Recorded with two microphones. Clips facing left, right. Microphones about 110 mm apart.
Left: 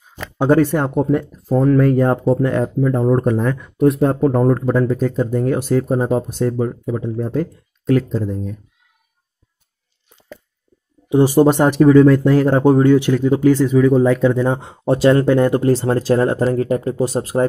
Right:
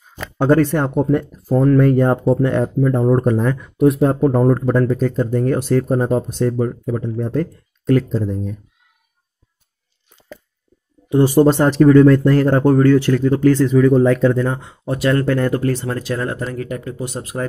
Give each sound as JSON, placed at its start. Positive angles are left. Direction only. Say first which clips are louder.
{"t": 0.4, "sound": "speech", "louder": "even", "side_deg": 10}
{"t": 11.1, "sound": "speech", "louder": "even", "side_deg": 15}
{"t": 14.6, "sound": "speech", "louder": "left 6 dB", "side_deg": 30}